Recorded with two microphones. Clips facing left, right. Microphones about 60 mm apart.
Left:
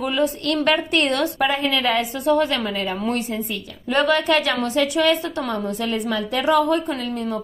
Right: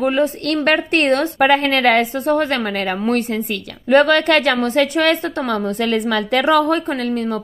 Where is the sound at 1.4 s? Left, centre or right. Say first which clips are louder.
Right 9 dB; right.